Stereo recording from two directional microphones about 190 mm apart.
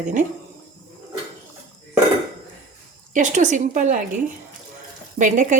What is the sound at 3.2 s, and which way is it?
Speech, 40° right (ahead or behind).